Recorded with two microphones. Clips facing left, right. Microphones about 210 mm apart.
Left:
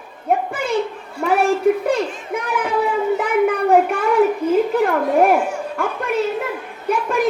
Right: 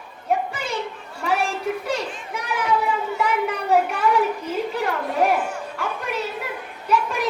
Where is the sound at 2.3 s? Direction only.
55° left (ahead or behind).